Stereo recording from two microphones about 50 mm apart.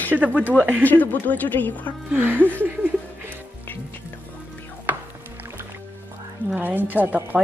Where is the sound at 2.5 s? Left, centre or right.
Right.